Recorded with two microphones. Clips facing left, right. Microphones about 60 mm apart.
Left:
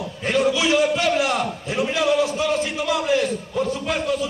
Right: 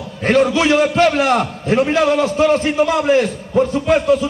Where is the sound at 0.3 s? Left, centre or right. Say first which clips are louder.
Right 6 dB; right.